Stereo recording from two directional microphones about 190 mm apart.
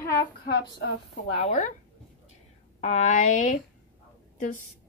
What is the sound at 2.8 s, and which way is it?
A woman's voice, 35° left (ahead or behind).